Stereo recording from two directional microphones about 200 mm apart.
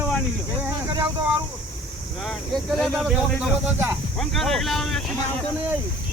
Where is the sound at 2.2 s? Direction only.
Centre (ahead or behind).